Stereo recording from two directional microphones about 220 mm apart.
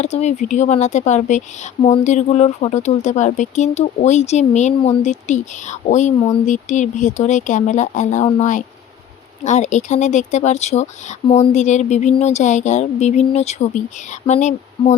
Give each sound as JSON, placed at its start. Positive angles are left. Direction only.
{"t": 0.0, "sound": "a woman's voice", "side_deg": 30}